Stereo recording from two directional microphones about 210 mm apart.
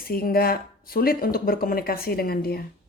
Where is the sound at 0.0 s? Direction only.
45° left (ahead or behind).